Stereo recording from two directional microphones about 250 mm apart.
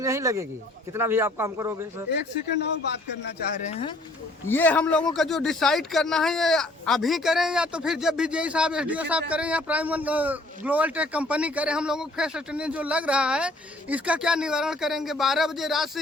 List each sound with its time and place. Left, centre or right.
0.0 s speech: centre
3.7 s speech: left
4.4 s a man's voice: centre